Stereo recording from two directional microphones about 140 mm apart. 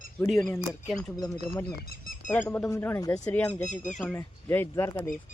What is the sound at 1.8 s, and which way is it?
Speech, 90° left.